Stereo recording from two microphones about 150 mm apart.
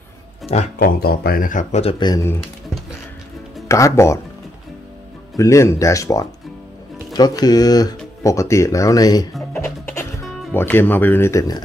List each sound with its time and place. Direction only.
0.7 s speech: 80° left; by 2.0 s 45° left (ahead or behind)
2.0 s speech: 30° left (ahead or behind)
3.6 s speech: 20° left (ahead or behind)
5.4 s speech: 20° left (ahead or behind)
9.5 s music: 20° left (ahead or behind)
10.5 s speech: 15° left (ahead or behind)